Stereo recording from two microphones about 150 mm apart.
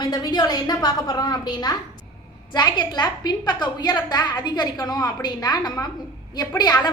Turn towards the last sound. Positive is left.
turn(degrees=25)  # may be behind; listen again after turning